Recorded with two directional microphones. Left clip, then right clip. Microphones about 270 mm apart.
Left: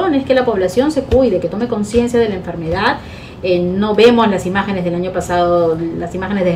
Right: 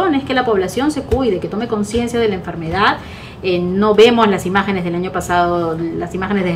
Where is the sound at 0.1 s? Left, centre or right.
Centre.